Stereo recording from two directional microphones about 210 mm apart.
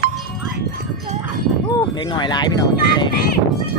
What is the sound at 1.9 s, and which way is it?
Speech, 20° left (ahead or behind).